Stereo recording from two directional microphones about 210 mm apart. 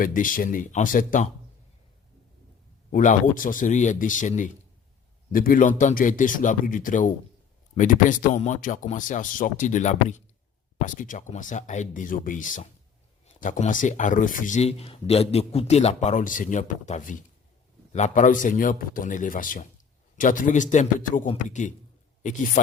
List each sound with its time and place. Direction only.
0.0 s a man's voice: 40° left (ahead or behind)
2.9 s a man's voice: 40° left (ahead or behind)